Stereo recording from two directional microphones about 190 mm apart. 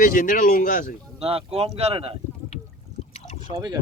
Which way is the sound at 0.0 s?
45° left (ahead or behind).